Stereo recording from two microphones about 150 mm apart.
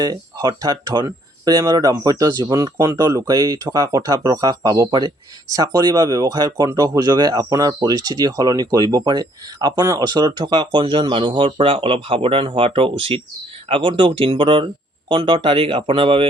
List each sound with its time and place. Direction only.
0.0 s speech: 25° right (ahead or behind)